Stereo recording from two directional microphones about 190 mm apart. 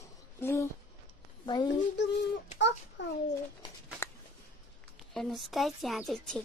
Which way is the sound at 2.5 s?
70° left (ahead or behind).